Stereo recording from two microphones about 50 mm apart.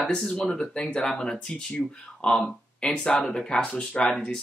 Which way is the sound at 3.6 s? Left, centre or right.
Left.